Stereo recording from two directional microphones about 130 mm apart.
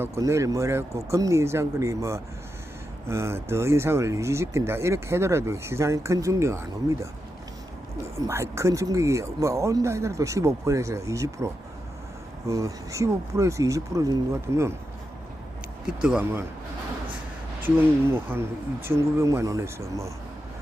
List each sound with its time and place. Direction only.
0.0 s speech: 20° right (ahead or behind)
8.3 s speech: 20° right (ahead or behind)
15.9 s speech: 10° right (ahead or behind)
17.6 s speech: 15° right (ahead or behind)